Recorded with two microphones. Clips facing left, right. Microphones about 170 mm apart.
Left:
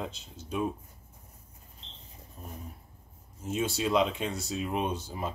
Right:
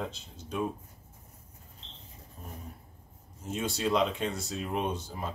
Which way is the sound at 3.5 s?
5° left (ahead or behind).